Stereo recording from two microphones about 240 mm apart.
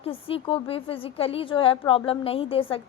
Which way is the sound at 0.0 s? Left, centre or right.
Left.